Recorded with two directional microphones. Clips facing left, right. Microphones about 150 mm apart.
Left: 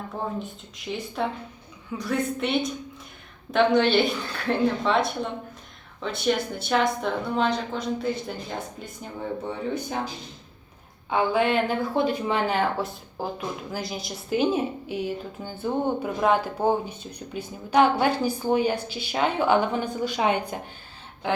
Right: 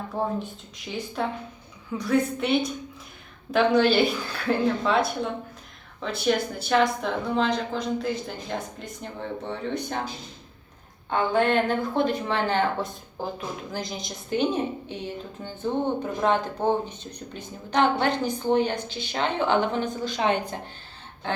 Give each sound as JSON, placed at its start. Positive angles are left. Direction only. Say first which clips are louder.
{"t": 0.2, "sound": "speech", "louder": "right 4 dB", "side_deg": -30}
{"t": 0.9, "sound": "a woman's voice", "louder": "even", "side_deg": 0}
{"t": 11.1, "sound": "a woman's voice", "louder": "even", "side_deg": 5}